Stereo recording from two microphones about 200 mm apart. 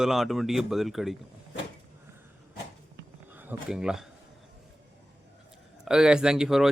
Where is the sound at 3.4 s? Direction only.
5° right (ahead or behind).